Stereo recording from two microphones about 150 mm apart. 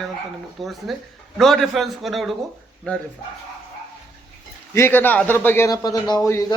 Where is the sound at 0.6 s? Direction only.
Centre (ahead or behind).